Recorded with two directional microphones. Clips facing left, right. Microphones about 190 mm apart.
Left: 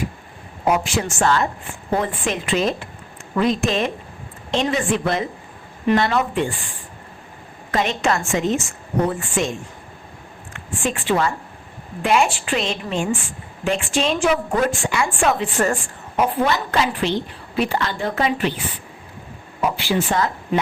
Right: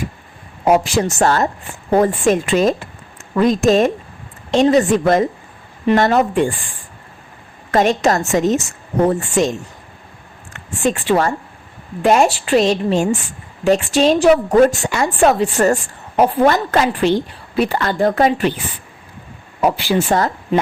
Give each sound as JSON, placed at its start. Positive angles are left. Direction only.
{"t": 0.6, "sound": "a woman's voice", "side_deg": -40}
{"t": 7.7, "sound": "a woman's voice", "side_deg": -45}
{"t": 19.9, "sound": "a woman's voice", "side_deg": -40}